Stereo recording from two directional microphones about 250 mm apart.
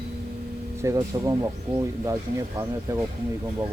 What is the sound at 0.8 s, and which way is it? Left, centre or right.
Speech, centre.